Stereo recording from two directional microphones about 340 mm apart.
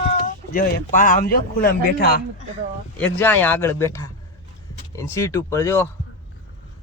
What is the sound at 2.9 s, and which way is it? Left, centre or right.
A man's voice, centre.